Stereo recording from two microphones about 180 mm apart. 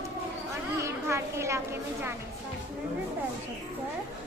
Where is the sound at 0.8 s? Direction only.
15° right (ahead or behind).